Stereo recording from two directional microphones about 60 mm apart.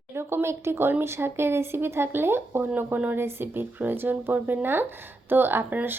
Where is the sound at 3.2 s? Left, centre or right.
Right.